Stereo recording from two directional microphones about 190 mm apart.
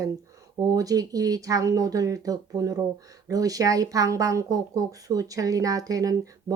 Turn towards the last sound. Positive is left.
turn(degrees=-20)  # may be behind; listen again after turning